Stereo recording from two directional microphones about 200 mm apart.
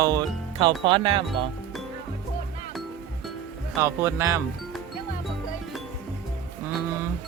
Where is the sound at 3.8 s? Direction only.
15° right (ahead or behind).